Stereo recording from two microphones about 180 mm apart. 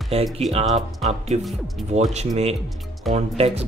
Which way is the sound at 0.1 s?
35° right (ahead or behind).